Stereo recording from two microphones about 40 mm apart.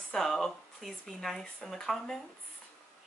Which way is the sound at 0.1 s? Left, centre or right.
Centre.